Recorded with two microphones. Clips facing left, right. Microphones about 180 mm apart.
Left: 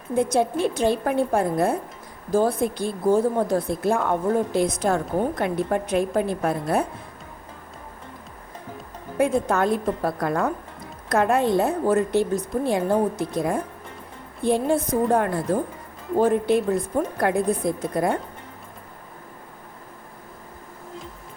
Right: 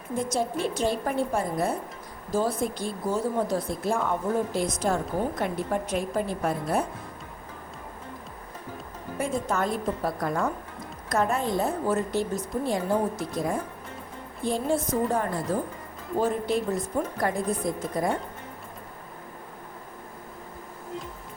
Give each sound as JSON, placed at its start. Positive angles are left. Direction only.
{"t": 0.2, "sound": "a woman's voice", "side_deg": 60}
{"t": 9.2, "sound": "a woman's voice", "side_deg": 60}